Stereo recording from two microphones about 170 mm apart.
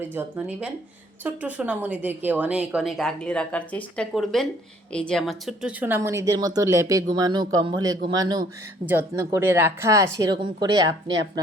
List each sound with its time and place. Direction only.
0.0 s a woman's voice: 10° right (ahead or behind)